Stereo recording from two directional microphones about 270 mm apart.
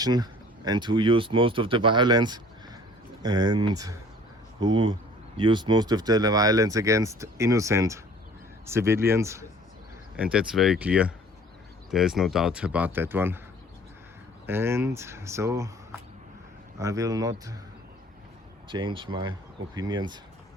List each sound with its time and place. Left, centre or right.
0.0 s speech: centre
14.4 s speech: centre
18.7 s speech: centre